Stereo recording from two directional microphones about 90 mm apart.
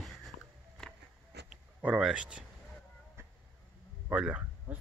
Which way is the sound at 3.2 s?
30° right (ahead or behind).